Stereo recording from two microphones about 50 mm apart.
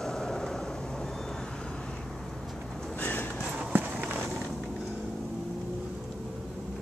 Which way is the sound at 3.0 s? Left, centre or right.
Left.